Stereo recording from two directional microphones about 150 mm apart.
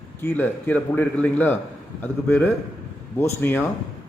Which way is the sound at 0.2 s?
15° left (ahead or behind).